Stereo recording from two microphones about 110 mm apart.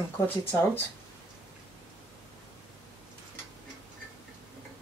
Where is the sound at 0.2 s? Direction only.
25° left (ahead or behind).